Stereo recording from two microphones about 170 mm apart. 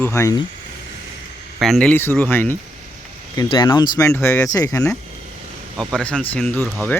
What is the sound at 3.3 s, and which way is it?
Speech, 25° left (ahead or behind).